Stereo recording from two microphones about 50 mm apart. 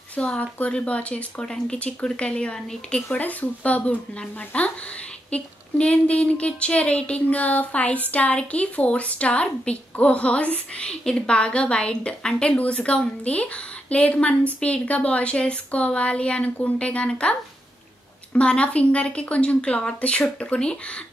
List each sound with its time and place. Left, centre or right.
0.1 s speech: left
1.4 s speech: centre
3.1 s speech: left